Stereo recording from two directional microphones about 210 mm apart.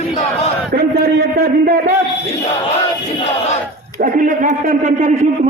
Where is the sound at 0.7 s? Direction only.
45° right (ahead or behind).